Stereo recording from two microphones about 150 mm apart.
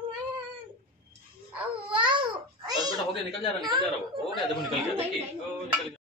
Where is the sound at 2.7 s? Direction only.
25° right (ahead or behind).